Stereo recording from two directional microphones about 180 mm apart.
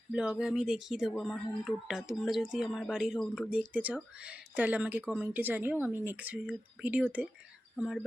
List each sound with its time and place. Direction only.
0.1 s speech: 5° right (ahead or behind)